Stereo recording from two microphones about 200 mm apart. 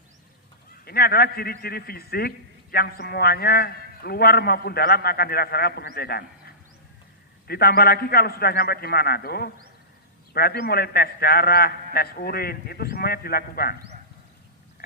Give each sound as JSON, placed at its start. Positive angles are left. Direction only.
{"t": 0.8, "sound": "a man's voice", "side_deg": 50}